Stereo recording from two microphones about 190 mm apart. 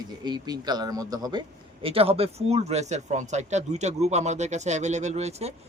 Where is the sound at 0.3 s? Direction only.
20° right (ahead or behind).